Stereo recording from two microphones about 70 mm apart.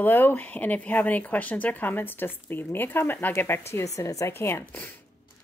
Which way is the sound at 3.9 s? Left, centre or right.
Left.